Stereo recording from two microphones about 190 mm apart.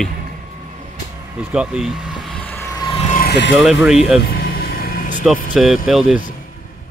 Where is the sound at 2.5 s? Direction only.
15° left (ahead or behind).